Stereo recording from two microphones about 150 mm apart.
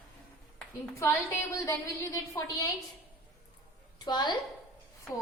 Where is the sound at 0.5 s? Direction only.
15° left (ahead or behind).